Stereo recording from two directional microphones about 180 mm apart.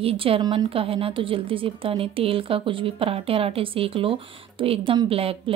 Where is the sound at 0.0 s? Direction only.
30° right (ahead or behind).